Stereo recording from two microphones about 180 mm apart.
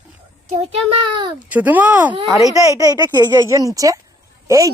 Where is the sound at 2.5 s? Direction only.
20° right (ahead or behind).